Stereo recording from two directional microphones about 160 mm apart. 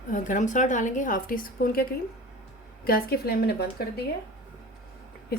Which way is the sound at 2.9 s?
70° left (ahead or behind).